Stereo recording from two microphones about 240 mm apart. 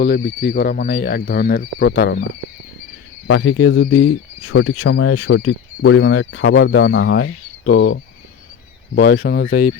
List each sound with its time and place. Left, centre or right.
0.0 s speech: left
3.2 s speech: left
5.5 s a man's voice: left
9.0 s a man's voice: left